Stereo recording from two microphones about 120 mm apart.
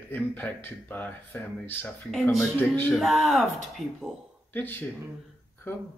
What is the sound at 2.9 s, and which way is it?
Speech, centre (ahead or behind).